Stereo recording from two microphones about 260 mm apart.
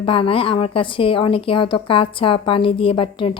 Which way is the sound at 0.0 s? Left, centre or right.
Left.